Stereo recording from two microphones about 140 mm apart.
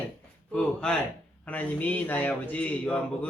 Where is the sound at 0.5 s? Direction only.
5° left (ahead or behind).